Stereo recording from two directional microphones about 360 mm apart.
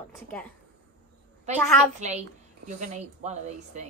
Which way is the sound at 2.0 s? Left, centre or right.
Centre.